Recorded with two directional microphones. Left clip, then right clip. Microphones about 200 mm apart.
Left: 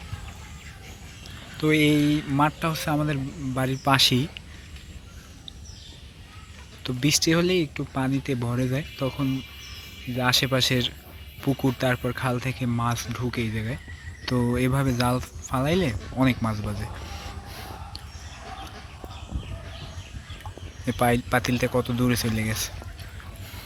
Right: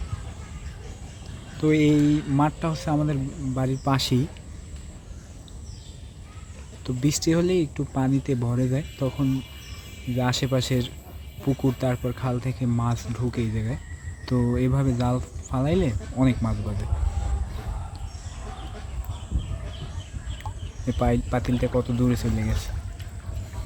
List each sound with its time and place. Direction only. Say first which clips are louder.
1.5 s speech: even; 5° right (ahead or behind)
3.0 s speech: even; 5° left (ahead or behind)
6.8 s speech: left 2 dB; centre (ahead or behind)
9.0 s speech: even; 10° left (ahead or behind)
10.2 s speech: left 4 dB; 5° right (ahead or behind)
11.4 s speech: even; 25° left (ahead or behind)
11.8 s speech: left 2 dB; centre (ahead or behind)
14.3 s speech: even; 5° left (ahead or behind)
20.8 s speech: left 2 dB; 5° left (ahead or behind)